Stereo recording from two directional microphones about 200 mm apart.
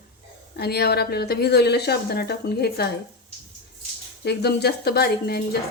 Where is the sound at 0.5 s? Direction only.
55° left (ahead or behind).